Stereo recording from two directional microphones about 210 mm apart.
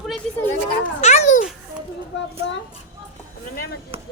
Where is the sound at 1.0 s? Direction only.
35° left (ahead or behind).